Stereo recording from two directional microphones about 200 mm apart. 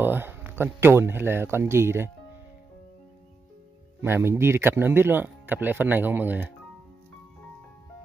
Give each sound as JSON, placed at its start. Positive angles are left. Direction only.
{"t": 0.0, "sound": "speech", "side_deg": -10}
{"t": 4.0, "sound": "speech", "side_deg": -10}